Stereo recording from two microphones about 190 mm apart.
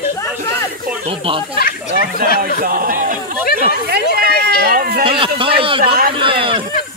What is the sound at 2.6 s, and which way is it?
Speech, 50° right (ahead or behind).